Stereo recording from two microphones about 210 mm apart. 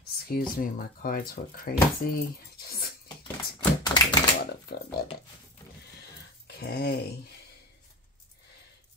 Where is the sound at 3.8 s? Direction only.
20° left (ahead or behind).